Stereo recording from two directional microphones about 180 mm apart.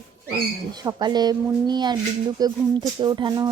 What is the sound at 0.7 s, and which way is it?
Speech, 20° right (ahead or behind).